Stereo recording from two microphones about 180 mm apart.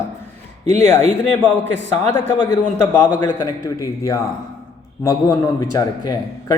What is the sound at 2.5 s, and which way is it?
A man's voice, 20° left (ahead or behind).